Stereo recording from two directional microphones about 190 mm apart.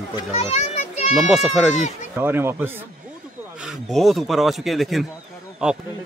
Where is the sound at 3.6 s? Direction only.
Centre (ahead or behind).